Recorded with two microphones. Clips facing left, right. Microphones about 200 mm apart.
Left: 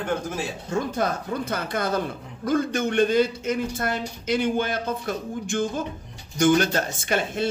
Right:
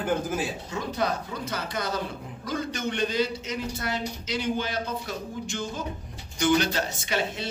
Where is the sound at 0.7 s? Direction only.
50° left (ahead or behind).